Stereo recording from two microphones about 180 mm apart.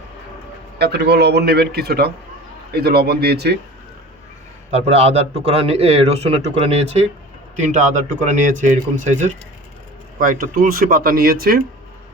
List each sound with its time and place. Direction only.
0.8 s speech: 65° right (ahead or behind)
4.7 s speech: 35° right (ahead or behind); by 11.6 s 55° right (ahead or behind)